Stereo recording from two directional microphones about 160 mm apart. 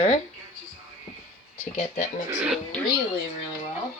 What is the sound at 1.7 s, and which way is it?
Speech, 55° left (ahead or behind).